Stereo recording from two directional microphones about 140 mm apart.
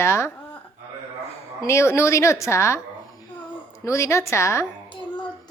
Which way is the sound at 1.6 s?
20° left (ahead or behind).